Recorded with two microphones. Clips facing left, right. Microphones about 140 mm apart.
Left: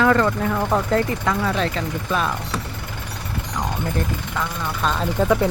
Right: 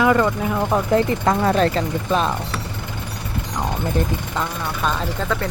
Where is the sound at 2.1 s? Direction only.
25° right (ahead or behind).